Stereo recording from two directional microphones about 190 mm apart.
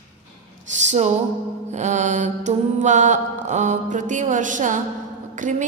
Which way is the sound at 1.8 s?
40° right (ahead or behind).